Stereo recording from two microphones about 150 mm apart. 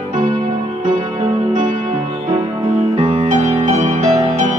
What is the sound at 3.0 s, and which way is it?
Music, 40° right (ahead or behind).